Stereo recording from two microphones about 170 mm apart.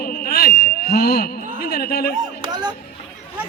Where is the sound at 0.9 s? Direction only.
65° left (ahead or behind).